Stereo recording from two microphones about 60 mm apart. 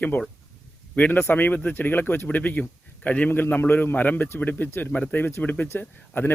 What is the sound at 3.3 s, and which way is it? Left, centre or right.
Speech, left.